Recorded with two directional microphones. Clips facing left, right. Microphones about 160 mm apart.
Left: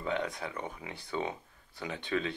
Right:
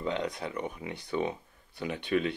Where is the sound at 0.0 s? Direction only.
20° right (ahead or behind).